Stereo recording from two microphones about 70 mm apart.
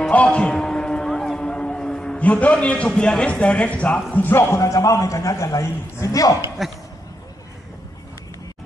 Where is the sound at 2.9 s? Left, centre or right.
Centre; by 6.3 s left.